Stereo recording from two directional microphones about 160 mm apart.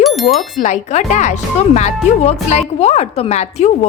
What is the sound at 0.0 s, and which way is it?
Speech, centre (ahead or behind).